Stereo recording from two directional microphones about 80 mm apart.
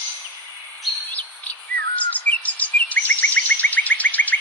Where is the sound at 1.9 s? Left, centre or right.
Centre.